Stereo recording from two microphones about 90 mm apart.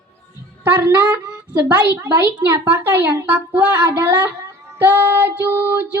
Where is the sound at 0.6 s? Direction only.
30° right (ahead or behind).